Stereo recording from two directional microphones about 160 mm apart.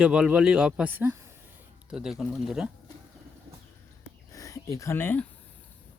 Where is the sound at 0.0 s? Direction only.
5° right (ahead or behind).